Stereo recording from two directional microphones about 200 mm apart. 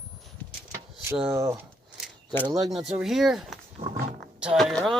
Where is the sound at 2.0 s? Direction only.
Centre (ahead or behind).